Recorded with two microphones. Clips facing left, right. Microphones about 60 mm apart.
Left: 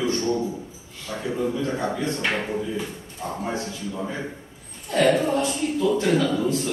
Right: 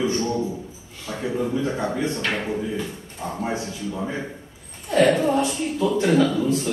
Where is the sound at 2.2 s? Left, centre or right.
Centre.